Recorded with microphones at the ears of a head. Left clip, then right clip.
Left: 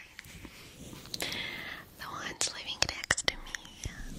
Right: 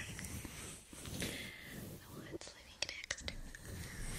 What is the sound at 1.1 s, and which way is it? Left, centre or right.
Whispering, left.